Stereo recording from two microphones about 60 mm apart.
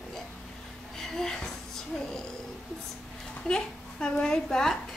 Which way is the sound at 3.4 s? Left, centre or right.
Centre.